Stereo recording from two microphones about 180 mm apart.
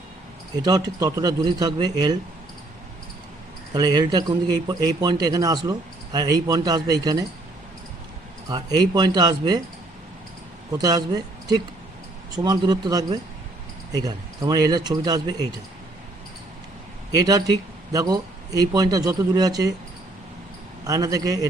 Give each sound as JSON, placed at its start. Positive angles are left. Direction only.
{"t": 0.5, "sound": "a man's voice", "side_deg": -20}
{"t": 3.8, "sound": "a man's voice", "side_deg": -20}
{"t": 8.4, "sound": "a man's voice", "side_deg": -20}
{"t": 10.8, "sound": "a man's voice", "side_deg": -20}
{"t": 17.1, "sound": "a man's voice", "side_deg": -20}
{"t": 20.8, "sound": "a man's voice", "side_deg": -20}